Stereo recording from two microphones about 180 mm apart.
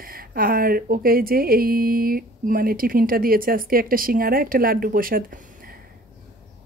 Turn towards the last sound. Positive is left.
turn(degrees=-50)  # may be behind; listen again after turning